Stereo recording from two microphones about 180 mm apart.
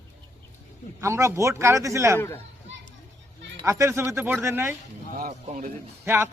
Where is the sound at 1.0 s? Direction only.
15° right (ahead or behind).